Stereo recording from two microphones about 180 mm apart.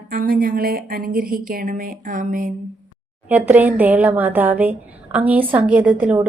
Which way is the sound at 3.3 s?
10° right (ahead or behind).